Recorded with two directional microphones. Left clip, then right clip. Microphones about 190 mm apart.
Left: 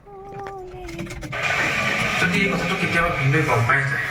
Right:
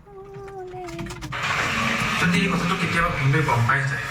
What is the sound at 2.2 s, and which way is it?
A man's voice, 10° right (ahead or behind).